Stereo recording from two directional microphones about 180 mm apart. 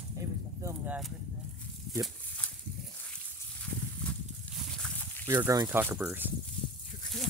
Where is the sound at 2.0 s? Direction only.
5° left (ahead or behind).